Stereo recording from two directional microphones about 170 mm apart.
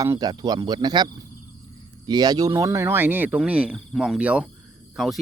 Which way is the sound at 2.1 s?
25° right (ahead or behind).